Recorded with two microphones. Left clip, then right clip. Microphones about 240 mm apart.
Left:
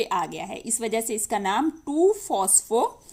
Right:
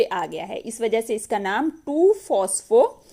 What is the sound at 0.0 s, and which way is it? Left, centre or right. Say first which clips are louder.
A woman's voice: right 3 dB; centre.